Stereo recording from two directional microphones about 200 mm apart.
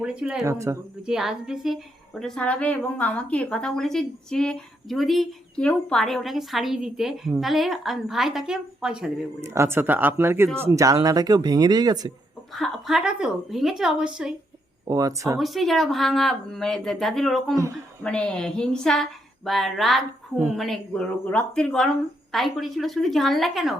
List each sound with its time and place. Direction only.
0.0 s a woman's voice: 5° right (ahead or behind)
0.4 s speech: 15° right (ahead or behind)
1.0 s a woman's voice: centre (ahead or behind); by 12.1 s 20° right (ahead or behind)
12.5 s a woman's voice: centre (ahead or behind)
14.8 s speech: 15° right (ahead or behind)
15.4 s a woman's voice: centre (ahead or behind)